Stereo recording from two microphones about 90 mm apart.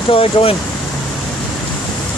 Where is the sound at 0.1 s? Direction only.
90° left.